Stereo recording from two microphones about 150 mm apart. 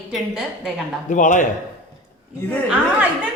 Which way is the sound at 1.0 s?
55° left (ahead or behind).